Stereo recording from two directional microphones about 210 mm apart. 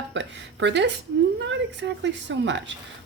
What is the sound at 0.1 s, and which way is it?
A woman's voice, 60° right (ahead or behind).